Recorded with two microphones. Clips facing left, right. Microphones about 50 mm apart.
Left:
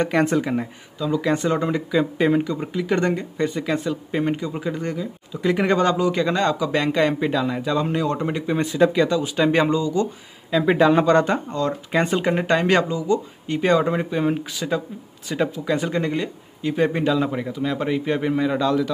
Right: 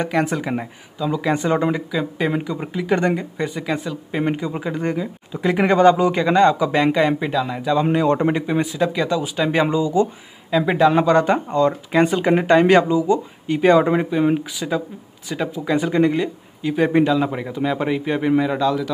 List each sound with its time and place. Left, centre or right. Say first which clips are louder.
0.1 s speech: left 1 dB; centre
1.9 s speech: left 3 dB; centre
4.2 s speech: right 4 dB; centre
6.9 s speech: right 2 dB; centre
7.8 s speech: right 5 dB; right
8.7 s speech: left 2 dB; centre
9.7 s speech: right 3 dB; centre
10.5 s speech: right 1 dB; centre
11.3 s speech: right 6 dB; right
11.9 s speech: right 1 dB; centre
15.5 s speech: right 3 dB; centre